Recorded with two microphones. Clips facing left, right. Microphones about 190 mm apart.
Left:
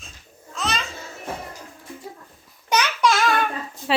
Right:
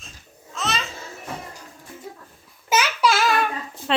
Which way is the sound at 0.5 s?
Centre (ahead or behind).